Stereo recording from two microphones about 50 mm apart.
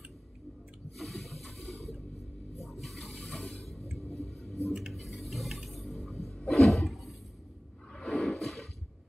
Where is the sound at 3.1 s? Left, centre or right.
Left.